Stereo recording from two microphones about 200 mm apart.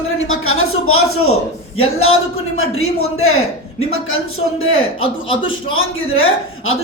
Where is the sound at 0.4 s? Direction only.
90° left.